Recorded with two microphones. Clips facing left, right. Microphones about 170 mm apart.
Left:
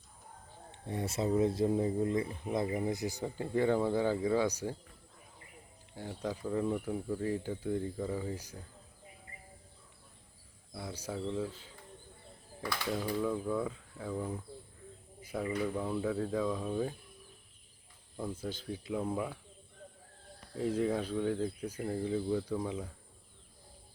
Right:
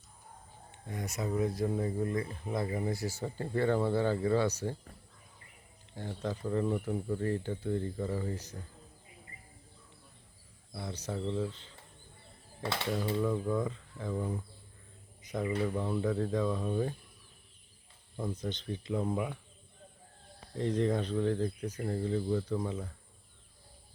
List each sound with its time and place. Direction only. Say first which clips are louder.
0.7 s speech: left 3 dB; 30° left (ahead or behind); by 4.8 s 10° left (ahead or behind)
6.0 s speech: right 1 dB; 10° left (ahead or behind)
10.8 s speech: right 1 dB; 10° left (ahead or behind)
12.6 s speech: right 2 dB; 25° right (ahead or behind)
13.2 s speech: right 2 dB; 5° left (ahead or behind)
15.2 s a sound: right 2 dB; 10° left (ahead or behind)
15.7 s speech: right 2 dB; 5° left (ahead or behind)
18.2 s speech: right 2 dB; 5° left (ahead or behind)
20.5 s speech: right 1 dB; 5° left (ahead or behind)